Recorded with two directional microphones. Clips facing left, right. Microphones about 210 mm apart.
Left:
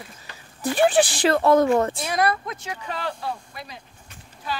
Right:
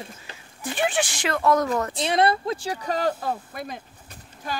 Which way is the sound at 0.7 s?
35° left (ahead or behind).